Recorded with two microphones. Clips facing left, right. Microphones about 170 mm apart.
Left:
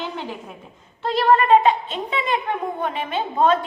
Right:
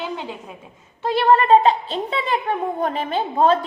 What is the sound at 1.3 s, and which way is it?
A woman's voice, 30° right (ahead or behind).